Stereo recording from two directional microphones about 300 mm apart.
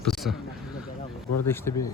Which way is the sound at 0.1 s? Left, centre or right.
Centre.